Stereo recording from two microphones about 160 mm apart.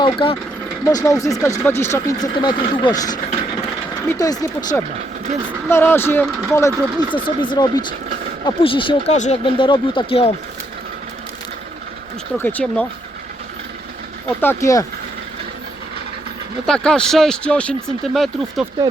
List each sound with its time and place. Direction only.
0.0 s speech: 30° left (ahead or behind)
0.9 s speech: 20° left (ahead or behind)
7.3 s speech: 30° left (ahead or behind)
9.1 s speech: 50° left (ahead or behind)
9.4 s speech: 30° left (ahead or behind)
12.4 s speech: 10° left (ahead or behind)
14.4 s speech: 20° left (ahead or behind)
16.6 s speech: 5° left (ahead or behind)